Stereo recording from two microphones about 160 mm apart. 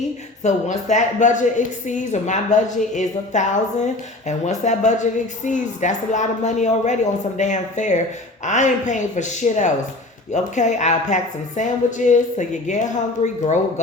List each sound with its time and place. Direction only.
0.4 s speech: 50° left (ahead or behind)